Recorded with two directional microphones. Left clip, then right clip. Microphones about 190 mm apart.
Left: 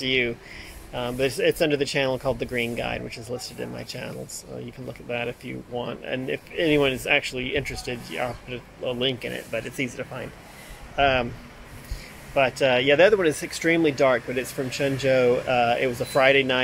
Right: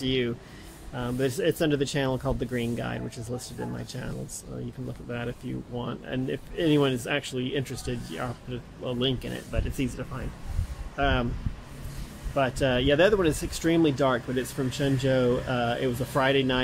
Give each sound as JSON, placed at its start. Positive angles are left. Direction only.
{"t": 0.0, "sound": "speech", "side_deg": -10}
{"t": 11.0, "sound": "speech", "side_deg": -5}
{"t": 12.4, "sound": "speech", "side_deg": -5}